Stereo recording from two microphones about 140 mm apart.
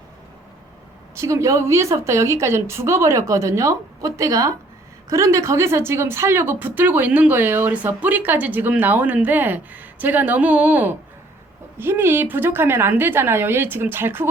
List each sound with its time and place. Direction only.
1.1 s a woman's voice: 20° right (ahead or behind)